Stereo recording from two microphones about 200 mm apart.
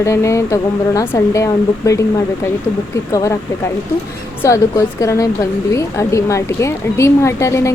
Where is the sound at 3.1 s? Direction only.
15° left (ahead or behind).